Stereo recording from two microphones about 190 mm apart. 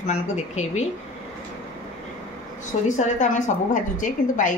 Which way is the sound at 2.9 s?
40° left (ahead or behind).